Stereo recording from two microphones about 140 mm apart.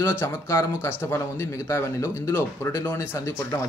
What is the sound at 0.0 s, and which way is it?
Speech, 15° left (ahead or behind).